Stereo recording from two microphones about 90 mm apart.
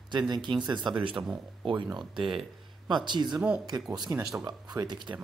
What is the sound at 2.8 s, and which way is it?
Speech, 55° right (ahead or behind).